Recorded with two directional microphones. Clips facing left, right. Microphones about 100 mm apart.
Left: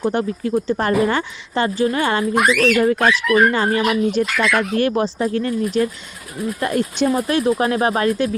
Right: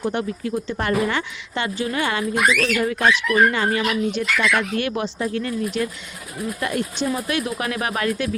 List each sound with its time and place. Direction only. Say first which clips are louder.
0.0 s speech: left 4 dB; 40° left (ahead or behind)